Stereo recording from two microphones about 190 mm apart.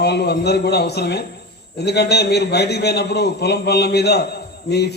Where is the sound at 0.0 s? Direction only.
60° left (ahead or behind).